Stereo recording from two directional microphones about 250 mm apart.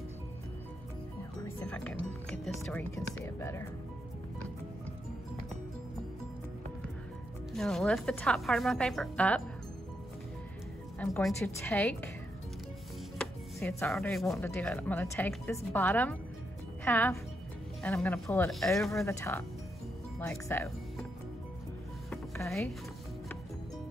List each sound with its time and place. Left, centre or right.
1.7 s speech: centre
7.5 s speech: centre
11.0 s speech: centre
13.2 s speech: centre
19.0 s speech: centre
22.1 s music: centre